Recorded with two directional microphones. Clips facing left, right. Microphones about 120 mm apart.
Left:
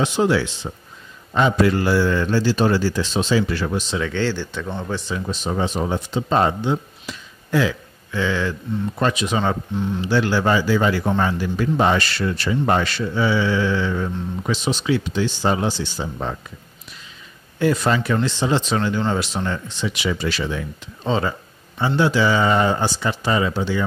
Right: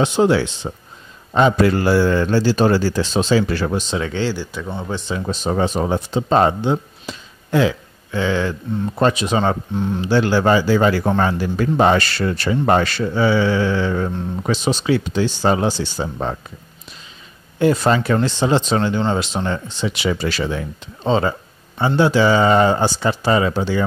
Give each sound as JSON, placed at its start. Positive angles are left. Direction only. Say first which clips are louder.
{"t": 0.0, "sound": "a man's voice", "louder": "right 3 dB", "side_deg": -30}
{"t": 1.6, "sound": "a man's voice", "louder": "right 2 dB", "side_deg": -40}
{"t": 4.1, "sound": "speech", "louder": "right 1 dB", "side_deg": -15}
{"t": 5.2, "sound": "a man's voice", "louder": "right 6 dB", "side_deg": -40}
{"t": 17.6, "sound": "speech", "louder": "right 3 dB", "side_deg": -30}
{"t": 20.1, "sound": "a man's voice", "louder": "right 3 dB", "side_deg": -40}